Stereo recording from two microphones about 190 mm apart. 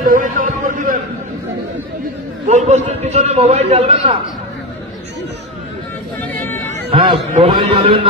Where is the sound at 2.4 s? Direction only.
35° right (ahead or behind).